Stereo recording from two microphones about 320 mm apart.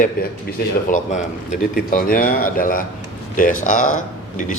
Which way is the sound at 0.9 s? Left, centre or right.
Left.